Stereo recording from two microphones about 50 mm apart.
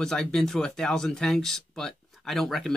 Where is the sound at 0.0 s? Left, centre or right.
Centre.